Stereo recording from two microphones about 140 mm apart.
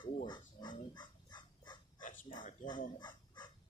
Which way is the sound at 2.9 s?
30° left (ahead or behind).